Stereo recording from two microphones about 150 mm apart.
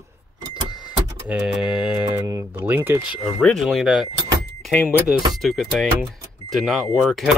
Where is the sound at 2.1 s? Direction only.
15° right (ahead or behind).